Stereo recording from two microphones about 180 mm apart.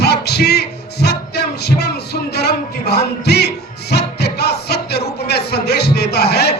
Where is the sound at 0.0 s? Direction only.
65° left (ahead or behind).